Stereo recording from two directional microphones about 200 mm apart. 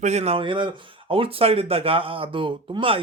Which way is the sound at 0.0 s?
35° right (ahead or behind).